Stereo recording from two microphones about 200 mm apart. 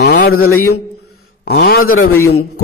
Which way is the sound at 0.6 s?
90° left.